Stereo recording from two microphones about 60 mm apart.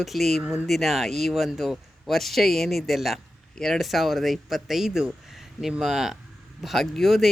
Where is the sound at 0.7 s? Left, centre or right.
Centre.